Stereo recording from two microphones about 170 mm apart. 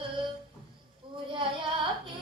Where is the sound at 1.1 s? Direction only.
30° right (ahead or behind).